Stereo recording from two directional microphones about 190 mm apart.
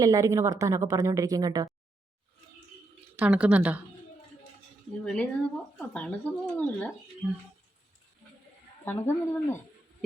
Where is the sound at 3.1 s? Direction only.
5° right (ahead or behind).